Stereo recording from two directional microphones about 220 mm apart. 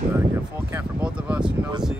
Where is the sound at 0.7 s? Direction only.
5° right (ahead or behind).